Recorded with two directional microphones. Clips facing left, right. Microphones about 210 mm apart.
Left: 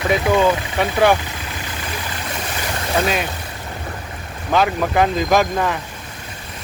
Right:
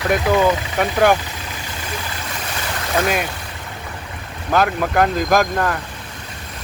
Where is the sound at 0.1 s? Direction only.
Centre (ahead or behind).